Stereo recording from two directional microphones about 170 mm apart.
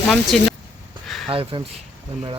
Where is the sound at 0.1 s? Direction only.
Centre (ahead or behind).